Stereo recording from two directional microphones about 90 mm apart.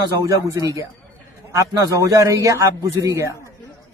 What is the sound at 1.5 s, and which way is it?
Speech, 35° right (ahead or behind).